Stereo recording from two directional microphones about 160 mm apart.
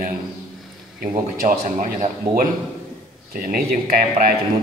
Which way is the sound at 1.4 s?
55° right (ahead or behind).